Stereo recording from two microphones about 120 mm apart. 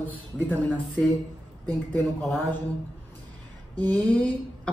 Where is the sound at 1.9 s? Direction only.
Centre (ahead or behind).